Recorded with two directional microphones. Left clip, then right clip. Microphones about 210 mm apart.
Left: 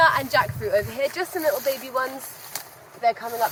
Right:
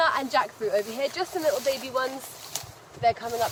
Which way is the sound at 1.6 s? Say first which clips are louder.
Left 2 dB; 10° left (ahead or behind).